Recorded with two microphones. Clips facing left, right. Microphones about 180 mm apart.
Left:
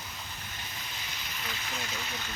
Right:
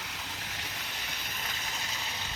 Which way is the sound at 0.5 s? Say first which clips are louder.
Right 1 dB; 80° right.